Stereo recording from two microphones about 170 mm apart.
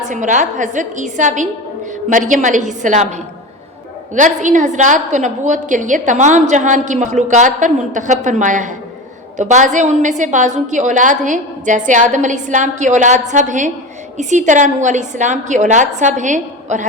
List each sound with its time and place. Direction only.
0.0 s a woman's voice: 45° right (ahead or behind)
4.1 s a woman's voice: 45° right (ahead or behind)